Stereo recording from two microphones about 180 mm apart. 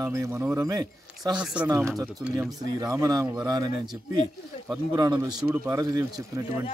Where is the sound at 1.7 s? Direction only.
15° right (ahead or behind).